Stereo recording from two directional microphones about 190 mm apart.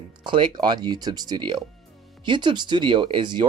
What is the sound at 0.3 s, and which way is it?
Speech, 25° right (ahead or behind).